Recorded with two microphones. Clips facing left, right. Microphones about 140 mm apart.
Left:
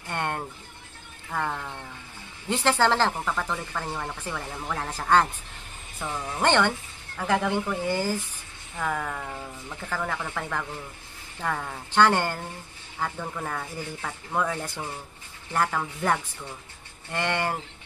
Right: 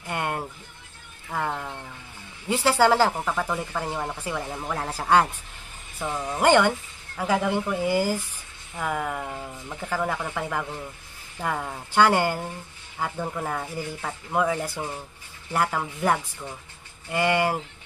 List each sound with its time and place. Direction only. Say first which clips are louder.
0.0 s a sound: right 1 dB; 5° right (ahead or behind)
1.3 s music: right 1 dB; 10° right (ahead or behind)
2.4 s speech: right 3 dB; 10° right (ahead or behind)